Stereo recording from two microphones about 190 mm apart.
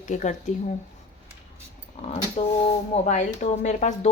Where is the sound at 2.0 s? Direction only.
35° left (ahead or behind).